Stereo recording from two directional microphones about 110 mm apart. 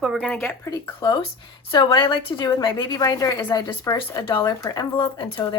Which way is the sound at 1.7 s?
45° left (ahead or behind).